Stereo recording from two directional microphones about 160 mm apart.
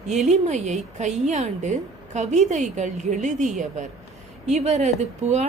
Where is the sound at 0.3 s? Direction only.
45° right (ahead or behind).